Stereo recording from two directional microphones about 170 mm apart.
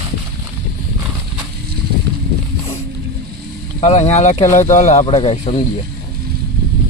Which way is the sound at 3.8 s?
40° left (ahead or behind).